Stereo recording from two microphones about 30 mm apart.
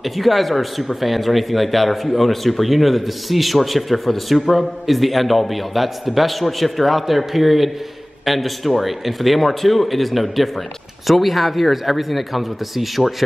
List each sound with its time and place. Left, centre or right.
0.0 s speech: centre